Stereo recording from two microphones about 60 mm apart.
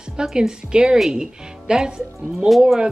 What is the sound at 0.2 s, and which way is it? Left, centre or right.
Speech, centre.